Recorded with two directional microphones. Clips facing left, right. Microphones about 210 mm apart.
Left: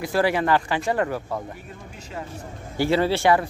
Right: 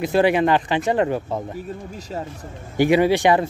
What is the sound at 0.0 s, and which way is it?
Speech, 20° right (ahead or behind).